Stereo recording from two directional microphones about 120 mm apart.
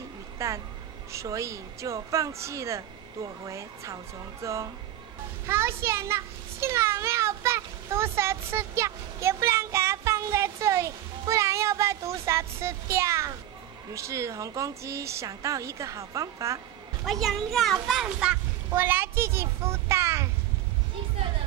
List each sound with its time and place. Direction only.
0.4 s speech: 25° right (ahead or behind)
5.5 s a sound: 20° right (ahead or behind)
13.9 s speech: 25° right (ahead or behind)
17.0 s a child's voice: centre (ahead or behind)
18.7 s a child's voice: 20° right (ahead or behind)